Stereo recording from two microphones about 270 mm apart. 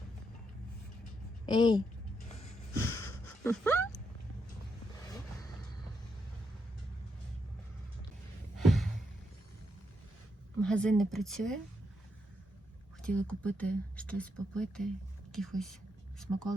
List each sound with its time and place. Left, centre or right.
1.5 s a woman's voice: centre
3.4 s dog: centre
5.0 s vehicle: centre
8.5 s a sound: centre
10.6 s speech: centre
13.0 s speech: centre